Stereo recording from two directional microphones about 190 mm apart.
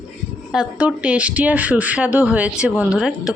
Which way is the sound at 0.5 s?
5° right (ahead or behind).